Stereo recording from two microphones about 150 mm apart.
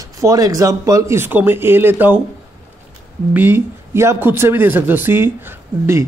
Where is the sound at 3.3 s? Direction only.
15° right (ahead or behind).